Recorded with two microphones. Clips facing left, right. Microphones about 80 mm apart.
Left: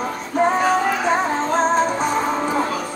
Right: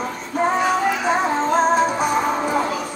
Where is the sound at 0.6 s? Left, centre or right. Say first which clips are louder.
Left 1 dB; left.